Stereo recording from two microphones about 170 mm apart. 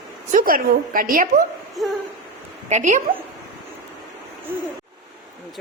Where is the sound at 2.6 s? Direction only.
45° right (ahead or behind).